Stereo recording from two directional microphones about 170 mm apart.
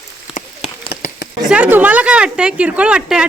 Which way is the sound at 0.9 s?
60° left (ahead or behind).